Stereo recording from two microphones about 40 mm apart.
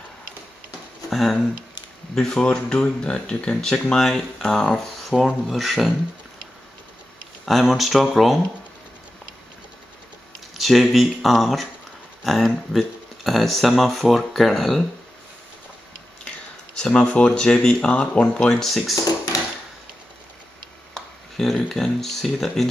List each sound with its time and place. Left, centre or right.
1.1 s speech: centre
2.1 s speech: centre
3.9 s speech: centre
5.1 s speech: centre
5.6 s speech: centre
7.4 s speech: centre
10.5 s speech: centre
16.8 s speech: left
17.3 s speech: centre
17.8 s speech: left
18.1 s speech: centre
20.9 s speech: centre